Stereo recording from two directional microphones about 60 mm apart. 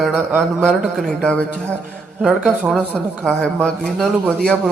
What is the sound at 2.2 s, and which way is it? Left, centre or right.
Speech, centre.